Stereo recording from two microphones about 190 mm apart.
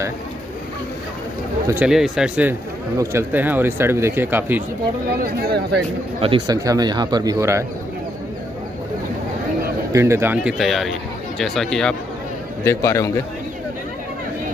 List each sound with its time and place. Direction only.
1.7 s speech: 5° right (ahead or behind)
5.2 s speech: 55° right (ahead or behind)
6.2 s speech: 25° right (ahead or behind)
9.9 s speech: 15° right (ahead or behind); by 11.9 s centre (ahead or behind)
12.6 s a man's voice: 15° left (ahead or behind)